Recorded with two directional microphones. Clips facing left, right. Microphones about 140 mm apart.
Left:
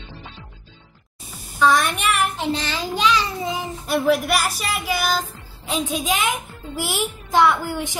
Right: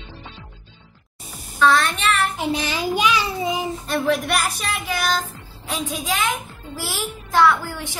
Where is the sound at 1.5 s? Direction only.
15° left (ahead or behind).